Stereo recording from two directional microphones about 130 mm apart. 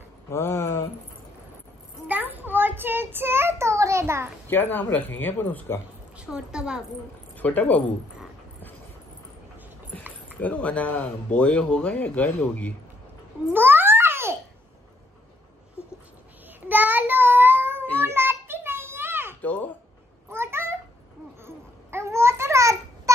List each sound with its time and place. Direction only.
0.3 s a sound: 20° left (ahead or behind)
2.0 s child singing: 15° right (ahead or behind)
4.5 s speech: 15° left (ahead or behind)
6.1 s a woman's voice: 5° right (ahead or behind)
7.3 s speech: 10° left (ahead or behind)
10.3 s speech: 10° left (ahead or behind)
13.5 s babbling: 15° right (ahead or behind)
16.6 s child singing: 15° right (ahead or behind)
18.0 s a sound: 15° right (ahead or behind)
19.4 s cat: 10° left (ahead or behind)
20.2 s a sound: 20° right (ahead or behind)
21.5 s babbling: 20° right (ahead or behind)